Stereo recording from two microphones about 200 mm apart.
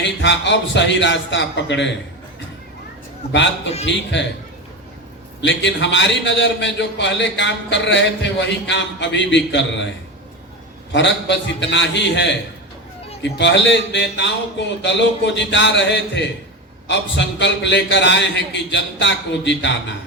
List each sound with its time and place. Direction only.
0.2 s a man's voice: 65° left (ahead or behind)
3.8 s a man's voice: 65° left (ahead or behind)
5.4 s a man's voice: 65° left (ahead or behind)
10.9 s a man's voice: 60° left (ahead or behind)